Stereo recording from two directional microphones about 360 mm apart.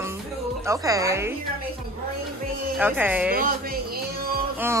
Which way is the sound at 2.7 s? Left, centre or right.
Centre.